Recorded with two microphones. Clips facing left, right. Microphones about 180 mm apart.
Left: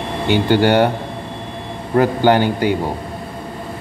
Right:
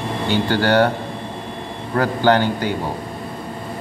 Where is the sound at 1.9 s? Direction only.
15° left (ahead or behind).